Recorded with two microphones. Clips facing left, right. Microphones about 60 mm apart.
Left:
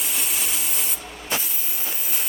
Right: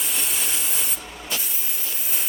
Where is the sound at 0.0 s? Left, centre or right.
Centre.